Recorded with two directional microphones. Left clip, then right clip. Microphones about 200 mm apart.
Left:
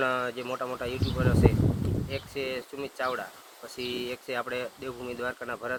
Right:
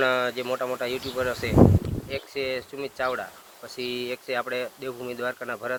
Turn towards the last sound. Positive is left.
turn(degrees=-5)  # may be behind; listen again after turning